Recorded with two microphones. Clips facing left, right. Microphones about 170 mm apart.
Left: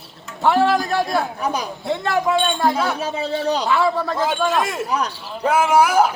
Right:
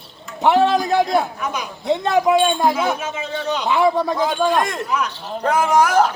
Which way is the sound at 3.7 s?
20° right (ahead or behind).